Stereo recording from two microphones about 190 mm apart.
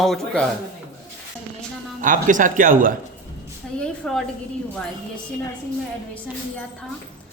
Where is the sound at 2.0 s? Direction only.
45° right (ahead or behind).